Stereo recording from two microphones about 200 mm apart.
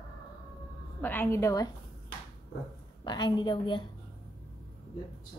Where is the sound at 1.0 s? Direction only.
10° left (ahead or behind).